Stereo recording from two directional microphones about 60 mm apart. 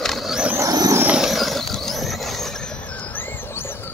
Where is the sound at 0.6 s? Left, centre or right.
Right.